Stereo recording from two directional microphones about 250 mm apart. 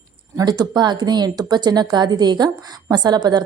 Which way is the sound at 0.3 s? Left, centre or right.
Centre.